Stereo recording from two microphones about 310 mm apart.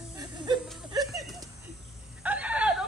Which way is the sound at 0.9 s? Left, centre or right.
Centre.